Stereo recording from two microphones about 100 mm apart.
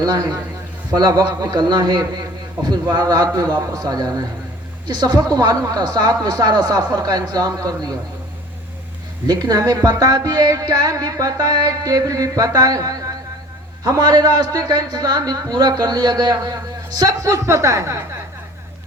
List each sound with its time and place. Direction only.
0.0 s a man's voice: 40° right (ahead or behind)
9.2 s a man's voice: 40° right (ahead or behind)